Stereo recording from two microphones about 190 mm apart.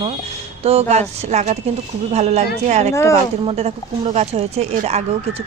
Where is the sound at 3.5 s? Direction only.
35° right (ahead or behind).